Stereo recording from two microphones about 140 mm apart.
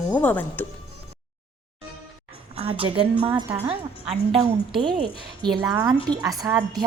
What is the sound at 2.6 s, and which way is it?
A woman's voice, 40° right (ahead or behind).